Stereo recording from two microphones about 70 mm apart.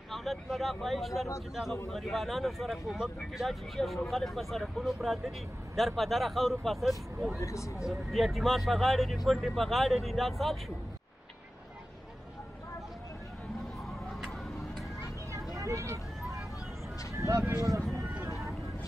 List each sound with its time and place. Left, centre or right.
0.1 s speech: centre
7.3 s speech: left
8.1 s speech: centre
15.5 s a sound: right